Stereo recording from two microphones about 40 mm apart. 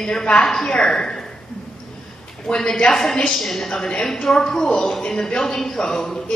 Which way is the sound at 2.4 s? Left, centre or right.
Centre.